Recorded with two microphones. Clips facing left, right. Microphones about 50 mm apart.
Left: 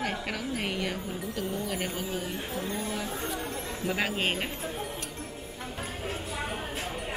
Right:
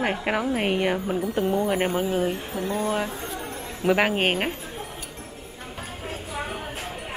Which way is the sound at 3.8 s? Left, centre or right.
Right.